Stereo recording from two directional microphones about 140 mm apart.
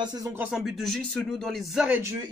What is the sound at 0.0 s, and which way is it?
Speech, 30° right (ahead or behind).